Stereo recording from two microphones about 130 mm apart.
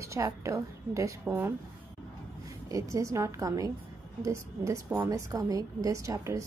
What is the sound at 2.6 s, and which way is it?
A woman's voice, 25° right (ahead or behind).